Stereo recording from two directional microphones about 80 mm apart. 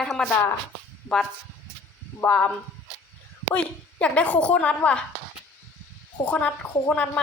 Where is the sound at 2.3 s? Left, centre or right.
Centre.